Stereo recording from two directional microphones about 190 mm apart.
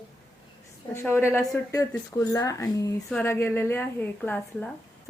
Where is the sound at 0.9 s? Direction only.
15° left (ahead or behind).